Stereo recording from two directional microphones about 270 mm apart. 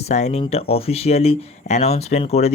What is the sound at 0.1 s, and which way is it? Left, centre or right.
Speech, left.